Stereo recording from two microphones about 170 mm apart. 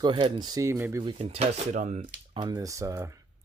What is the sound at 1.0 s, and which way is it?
Speech, 35° right (ahead or behind).